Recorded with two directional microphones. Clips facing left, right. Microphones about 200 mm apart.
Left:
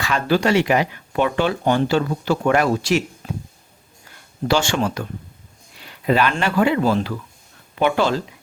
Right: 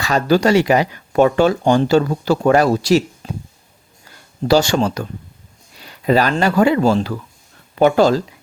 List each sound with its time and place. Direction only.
0.0 s speech: 40° right (ahead or behind)
3.2 s speech: 25° right (ahead or behind)
4.4 s speech: 40° right (ahead or behind)